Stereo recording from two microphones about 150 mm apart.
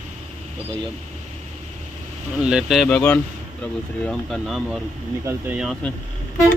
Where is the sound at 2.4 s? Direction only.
5° right (ahead or behind).